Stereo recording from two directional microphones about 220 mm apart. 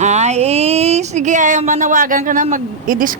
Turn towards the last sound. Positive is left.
turn(degrees=-40)  # may be behind; listen again after turning